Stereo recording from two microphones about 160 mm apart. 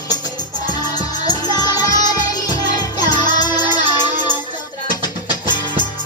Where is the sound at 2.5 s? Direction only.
25° left (ahead or behind).